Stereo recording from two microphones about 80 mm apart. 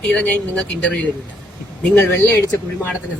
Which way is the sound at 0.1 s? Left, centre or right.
Centre.